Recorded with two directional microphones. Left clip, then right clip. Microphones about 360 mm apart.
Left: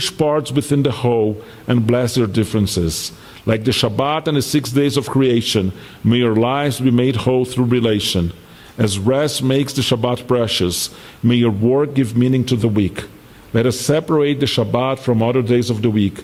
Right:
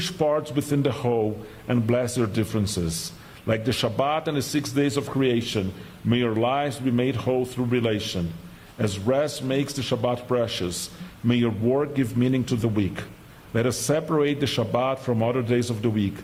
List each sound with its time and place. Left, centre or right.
0.2 s a man's voice: left